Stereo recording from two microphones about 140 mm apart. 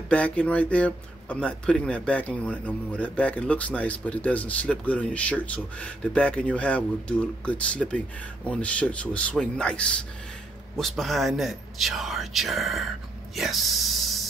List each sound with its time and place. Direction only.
0.1 s speech: 10° left (ahead or behind)